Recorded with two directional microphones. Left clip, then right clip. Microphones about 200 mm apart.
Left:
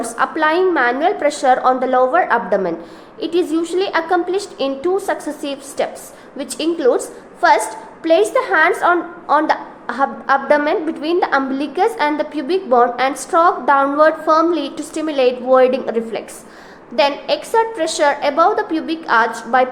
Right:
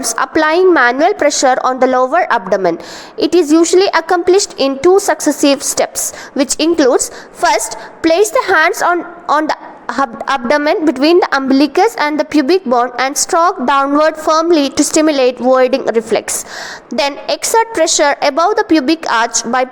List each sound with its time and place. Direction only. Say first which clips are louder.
0.0 s a woman's voice: right 4 dB; 40° right (ahead or behind)
8.0 s a woman's voice: right 3 dB; 40° right (ahead or behind)